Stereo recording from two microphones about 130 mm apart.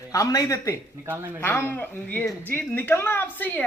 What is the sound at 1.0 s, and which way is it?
Speech, 15° right (ahead or behind).